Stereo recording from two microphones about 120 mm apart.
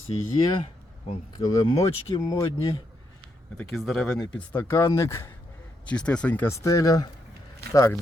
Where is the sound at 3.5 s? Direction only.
Centre (ahead or behind).